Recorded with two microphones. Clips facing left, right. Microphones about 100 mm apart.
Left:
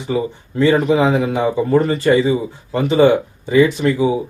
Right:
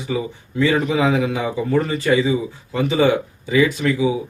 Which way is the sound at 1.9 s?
45° left (ahead or behind).